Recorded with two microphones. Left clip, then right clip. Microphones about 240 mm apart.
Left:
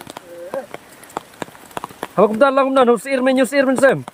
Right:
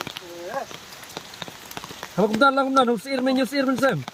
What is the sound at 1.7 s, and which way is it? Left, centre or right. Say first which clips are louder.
Speech: left 11 dB; centre.